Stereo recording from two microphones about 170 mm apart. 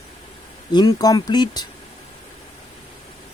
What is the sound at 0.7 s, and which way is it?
Speech, 25° left (ahead or behind).